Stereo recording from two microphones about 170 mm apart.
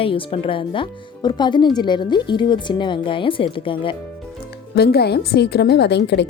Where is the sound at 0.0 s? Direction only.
30° left (ahead or behind).